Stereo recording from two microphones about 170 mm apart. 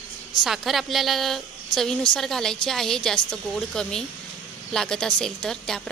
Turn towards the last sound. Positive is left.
turn(degrees=5)  # may be behind; listen again after turning